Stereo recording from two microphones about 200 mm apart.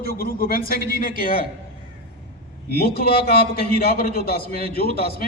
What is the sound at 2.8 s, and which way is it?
A man's voice, 50° left (ahead or behind).